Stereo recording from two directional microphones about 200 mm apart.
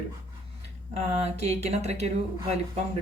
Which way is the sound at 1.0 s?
35° right (ahead or behind).